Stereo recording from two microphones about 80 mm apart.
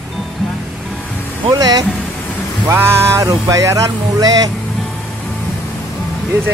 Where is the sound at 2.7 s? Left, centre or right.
Right.